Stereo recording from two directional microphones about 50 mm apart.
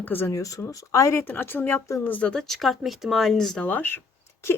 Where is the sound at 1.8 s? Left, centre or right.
Left.